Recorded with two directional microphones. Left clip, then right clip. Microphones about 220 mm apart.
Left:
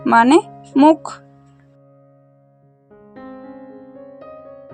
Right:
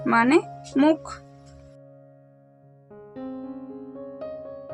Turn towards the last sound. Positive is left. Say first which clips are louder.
# right 2 dB
turn(degrees=0)  # may be behind; listen again after turning